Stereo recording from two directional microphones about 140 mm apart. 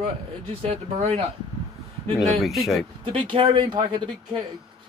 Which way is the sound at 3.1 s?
40° right (ahead or behind).